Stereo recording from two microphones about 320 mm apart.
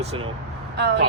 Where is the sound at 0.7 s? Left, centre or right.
Right.